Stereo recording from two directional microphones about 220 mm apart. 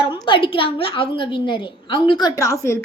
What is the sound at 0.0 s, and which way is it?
A woman's voice, 20° left (ahead or behind).